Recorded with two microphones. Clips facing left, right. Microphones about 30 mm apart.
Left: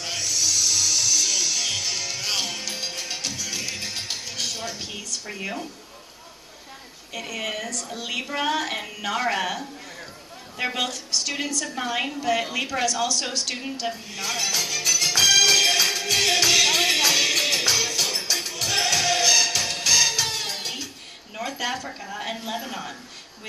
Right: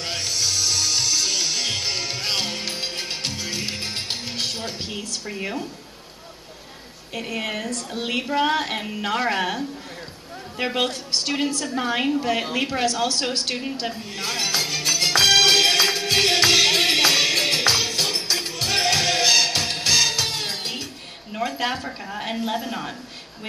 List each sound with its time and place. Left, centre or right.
0.0 s music: right
7.2 s a woman's voice: right
7.7 s a man's voice: right
8.2 s a woman's voice: right
10.8 s a woman's voice: right
11.6 s a woman's voice: right
13.8 s music: right
21.4 s speech: right
22.2 s a woman's voice: centre
22.7 s a woman's voice: right